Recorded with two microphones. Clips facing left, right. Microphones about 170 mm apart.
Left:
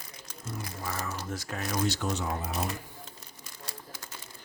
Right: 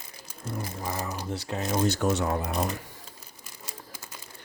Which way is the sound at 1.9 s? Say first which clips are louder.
Right 6 dB; 60° right (ahead or behind).